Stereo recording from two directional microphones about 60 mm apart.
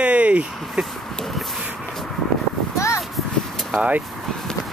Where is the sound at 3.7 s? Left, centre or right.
Right.